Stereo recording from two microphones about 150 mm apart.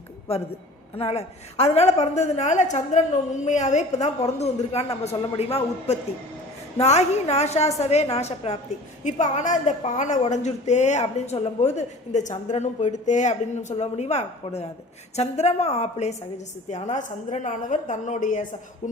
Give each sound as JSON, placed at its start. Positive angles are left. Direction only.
{"t": 0.9, "sound": "a woman's voice", "side_deg": 45}